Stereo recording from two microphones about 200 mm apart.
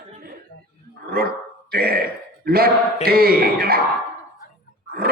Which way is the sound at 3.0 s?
50° right (ahead or behind).